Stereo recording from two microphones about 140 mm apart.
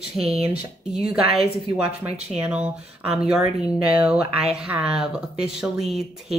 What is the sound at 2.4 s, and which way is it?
Speech, 10° right (ahead or behind).